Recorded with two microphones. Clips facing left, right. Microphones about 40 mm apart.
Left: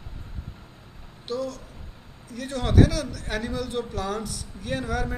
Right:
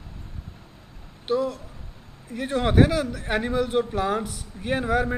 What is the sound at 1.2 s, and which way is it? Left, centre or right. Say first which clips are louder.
A man's voice: right 6 dB; right.